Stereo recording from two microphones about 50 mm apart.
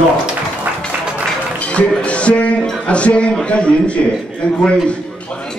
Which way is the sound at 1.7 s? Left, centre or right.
Left.